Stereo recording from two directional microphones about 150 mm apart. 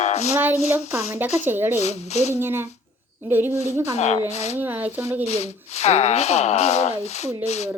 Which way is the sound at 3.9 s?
45° left (ahead or behind).